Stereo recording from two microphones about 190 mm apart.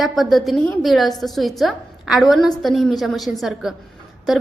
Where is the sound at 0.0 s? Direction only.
Centre (ahead or behind).